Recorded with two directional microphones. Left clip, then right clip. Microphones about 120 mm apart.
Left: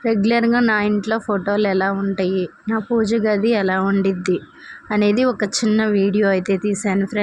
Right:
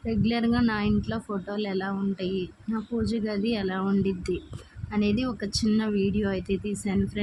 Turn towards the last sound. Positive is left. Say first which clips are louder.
# left 10 dB
turn(degrees=40)  # may be behind; listen again after turning